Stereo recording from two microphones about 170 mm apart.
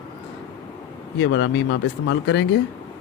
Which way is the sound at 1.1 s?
90° left.